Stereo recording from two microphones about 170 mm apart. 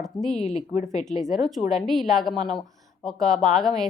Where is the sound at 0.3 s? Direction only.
40° left (ahead or behind).